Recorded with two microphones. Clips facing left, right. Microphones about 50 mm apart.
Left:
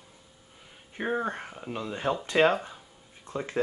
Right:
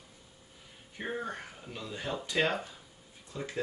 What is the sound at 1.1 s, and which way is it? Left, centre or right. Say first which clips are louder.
Speech: left 7 dB; left.